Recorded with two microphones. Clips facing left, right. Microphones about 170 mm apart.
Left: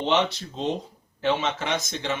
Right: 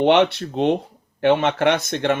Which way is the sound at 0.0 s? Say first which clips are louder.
Right 8 dB; 65° right (ahead or behind).